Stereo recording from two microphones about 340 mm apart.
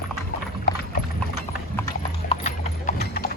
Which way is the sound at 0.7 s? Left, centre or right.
Left.